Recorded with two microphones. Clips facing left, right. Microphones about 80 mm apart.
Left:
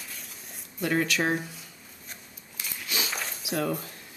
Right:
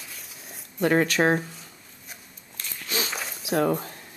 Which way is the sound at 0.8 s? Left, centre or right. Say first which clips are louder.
Right 5 dB; right.